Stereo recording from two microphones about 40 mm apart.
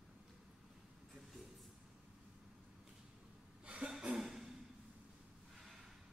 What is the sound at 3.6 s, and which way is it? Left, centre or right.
Cough, right.